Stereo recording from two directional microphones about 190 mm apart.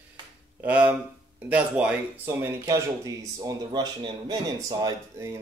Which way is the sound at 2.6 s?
15° right (ahead or behind).